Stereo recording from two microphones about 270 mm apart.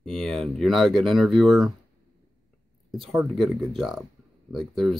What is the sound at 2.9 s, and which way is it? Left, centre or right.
Speech, centre.